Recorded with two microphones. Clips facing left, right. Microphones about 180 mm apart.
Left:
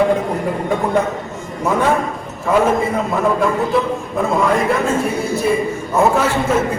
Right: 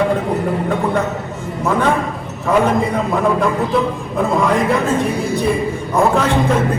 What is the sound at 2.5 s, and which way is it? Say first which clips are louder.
A man's voice: even; centre (ahead or behind).